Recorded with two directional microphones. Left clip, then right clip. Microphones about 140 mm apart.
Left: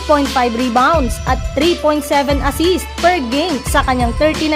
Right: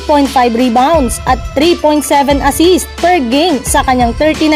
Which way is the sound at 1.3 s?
40° right (ahead or behind).